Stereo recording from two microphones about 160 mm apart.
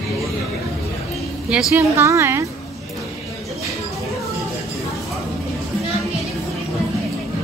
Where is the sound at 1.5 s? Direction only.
5° right (ahead or behind).